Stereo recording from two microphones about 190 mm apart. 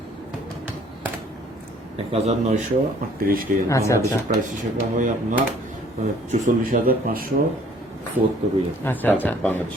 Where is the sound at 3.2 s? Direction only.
50° right (ahead or behind).